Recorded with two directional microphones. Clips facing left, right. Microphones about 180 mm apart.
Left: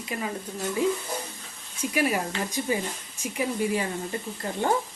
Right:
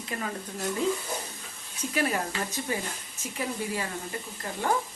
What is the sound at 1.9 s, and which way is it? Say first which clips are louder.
Speech: left 2 dB; 15° left (ahead or behind).